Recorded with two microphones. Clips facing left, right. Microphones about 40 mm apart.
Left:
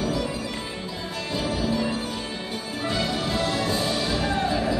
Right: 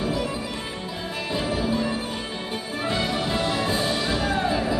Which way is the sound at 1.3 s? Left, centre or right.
Right.